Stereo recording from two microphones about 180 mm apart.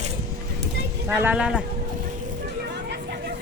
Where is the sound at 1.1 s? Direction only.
10° right (ahead or behind).